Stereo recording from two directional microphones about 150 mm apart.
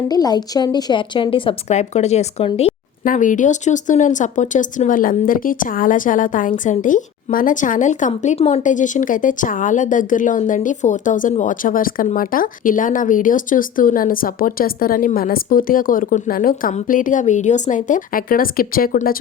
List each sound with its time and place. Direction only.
0.1 s a woman's voice: 25° left (ahead or behind)
1.7 s speech: 50° left (ahead or behind)
3.0 s speech: 60° left (ahead or behind)